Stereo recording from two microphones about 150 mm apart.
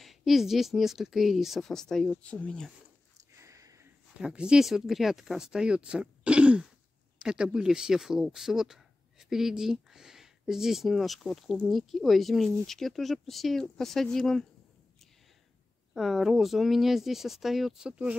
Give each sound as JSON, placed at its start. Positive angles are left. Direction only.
{"t": 0.0, "sound": "speech", "side_deg": 0}
{"t": 3.3, "sound": "a sound", "side_deg": -20}
{"t": 4.2, "sound": "speech", "side_deg": -5}
{"t": 15.9, "sound": "speech", "side_deg": 0}